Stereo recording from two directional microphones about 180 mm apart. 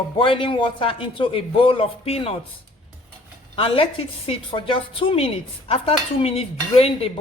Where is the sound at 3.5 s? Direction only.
30° left (ahead or behind).